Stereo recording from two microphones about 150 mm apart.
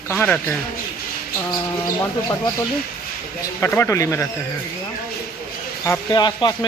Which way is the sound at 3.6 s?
15° left (ahead or behind).